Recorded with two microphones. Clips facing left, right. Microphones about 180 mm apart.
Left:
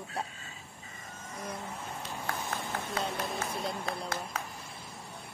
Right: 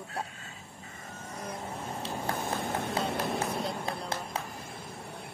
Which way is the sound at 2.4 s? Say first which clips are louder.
Right 4 dB; 55° right (ahead or behind).